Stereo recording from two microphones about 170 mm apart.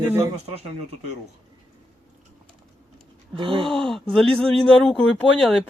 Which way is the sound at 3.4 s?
30° right (ahead or behind).